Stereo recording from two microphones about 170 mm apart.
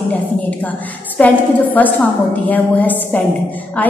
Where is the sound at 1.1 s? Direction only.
10° left (ahead or behind).